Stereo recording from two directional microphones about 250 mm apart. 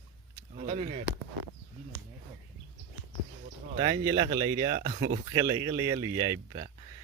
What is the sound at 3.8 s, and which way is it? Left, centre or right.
Speech, centre.